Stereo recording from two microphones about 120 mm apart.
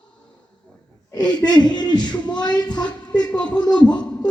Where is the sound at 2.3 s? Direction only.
35° left (ahead or behind).